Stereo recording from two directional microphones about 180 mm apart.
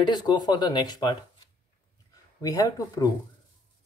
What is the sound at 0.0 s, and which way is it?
Speech, 25° left (ahead or behind).